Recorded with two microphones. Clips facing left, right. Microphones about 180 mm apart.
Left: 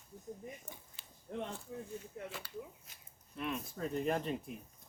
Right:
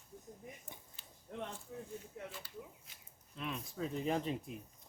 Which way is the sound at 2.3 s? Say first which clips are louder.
Left 3 dB; 75° left (ahead or behind).